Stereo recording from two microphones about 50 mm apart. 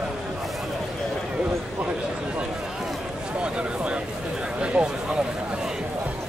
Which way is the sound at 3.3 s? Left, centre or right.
Right.